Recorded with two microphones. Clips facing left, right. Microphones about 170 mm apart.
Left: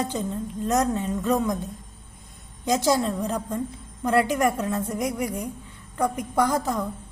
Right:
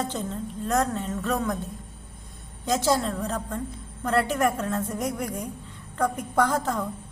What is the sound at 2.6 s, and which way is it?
A woman's voice, 15° left (ahead or behind).